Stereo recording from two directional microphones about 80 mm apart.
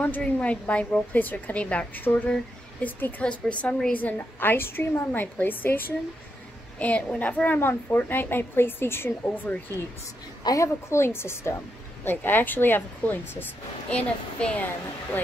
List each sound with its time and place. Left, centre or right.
0.0 s a woman's voice: centre
10.4 s a woman's voice: left; by 14.7 s centre